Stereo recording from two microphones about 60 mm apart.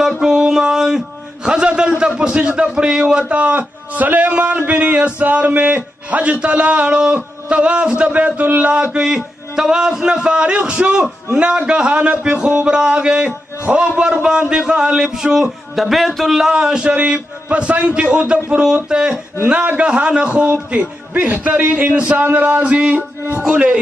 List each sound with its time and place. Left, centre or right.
0.2 s a man's voice: centre; by 23.4 s right
23.4 s a man's voice: centre